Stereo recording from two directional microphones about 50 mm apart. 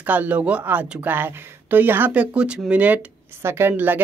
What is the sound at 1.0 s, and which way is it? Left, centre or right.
Speech, right.